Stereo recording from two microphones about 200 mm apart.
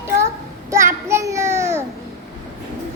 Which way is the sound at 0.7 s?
15° right (ahead or behind).